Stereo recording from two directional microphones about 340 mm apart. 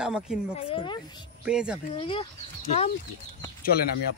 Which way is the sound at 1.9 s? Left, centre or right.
Centre.